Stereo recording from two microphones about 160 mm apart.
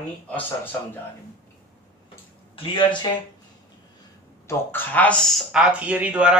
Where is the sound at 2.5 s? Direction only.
30° left (ahead or behind).